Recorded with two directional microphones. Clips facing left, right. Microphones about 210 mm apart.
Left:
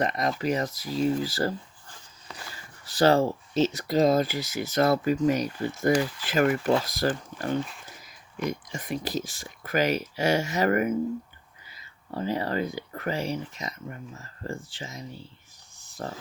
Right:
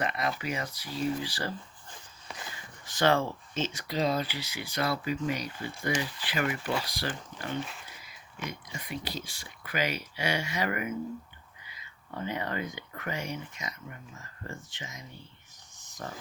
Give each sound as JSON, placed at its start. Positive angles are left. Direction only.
{"t": 0.0, "sound": "speech", "side_deg": 40}
{"t": 2.8, "sound": "speech", "side_deg": 35}